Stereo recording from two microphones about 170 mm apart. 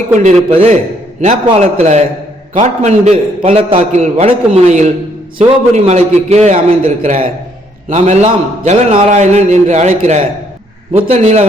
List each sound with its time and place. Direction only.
0.1 s a man's voice: 45° right (ahead or behind)
0.5 s a man's voice: 35° right (ahead or behind)